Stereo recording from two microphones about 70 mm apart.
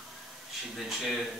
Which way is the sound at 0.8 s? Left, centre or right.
Centre.